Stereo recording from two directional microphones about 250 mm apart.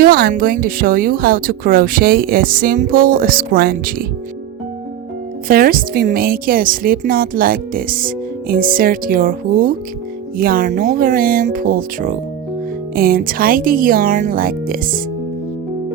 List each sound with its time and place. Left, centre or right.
0.0 s a woman's voice: right
5.5 s a woman's voice: right